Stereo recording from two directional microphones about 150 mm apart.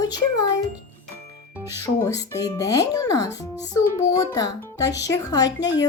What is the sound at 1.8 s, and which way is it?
Speech, 20° left (ahead or behind).